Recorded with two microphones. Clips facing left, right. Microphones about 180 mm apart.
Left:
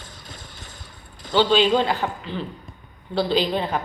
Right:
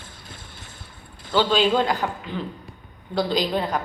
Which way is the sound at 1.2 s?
10° right (ahead or behind).